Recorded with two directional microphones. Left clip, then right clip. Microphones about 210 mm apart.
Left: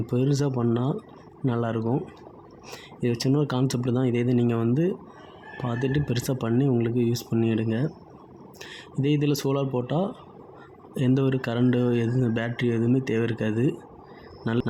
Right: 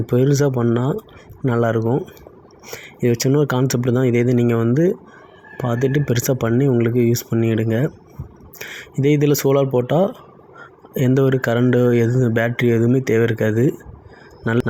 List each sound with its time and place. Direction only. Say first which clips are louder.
0.0 s speech: right 9 dB; 20° right (ahead or behind)